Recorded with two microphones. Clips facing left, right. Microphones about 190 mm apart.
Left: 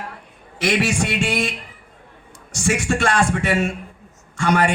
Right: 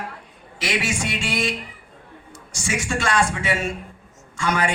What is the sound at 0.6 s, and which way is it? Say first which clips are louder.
Speech: left 5 dB; 60° left (ahead or behind).